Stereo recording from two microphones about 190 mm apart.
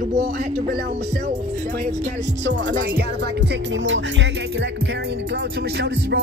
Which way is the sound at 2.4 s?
70° right (ahead or behind).